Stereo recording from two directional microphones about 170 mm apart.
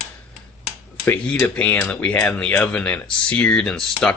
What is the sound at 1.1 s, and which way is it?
Speech, 10° left (ahead or behind).